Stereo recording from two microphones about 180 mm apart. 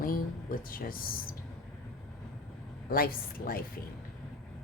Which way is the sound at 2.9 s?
55° left (ahead or behind).